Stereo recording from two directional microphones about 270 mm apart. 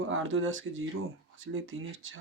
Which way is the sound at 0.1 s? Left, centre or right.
Right.